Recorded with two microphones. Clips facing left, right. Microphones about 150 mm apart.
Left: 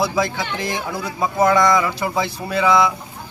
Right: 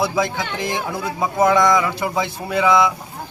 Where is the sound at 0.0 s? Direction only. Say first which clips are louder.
Even; 20° right (ahead or behind).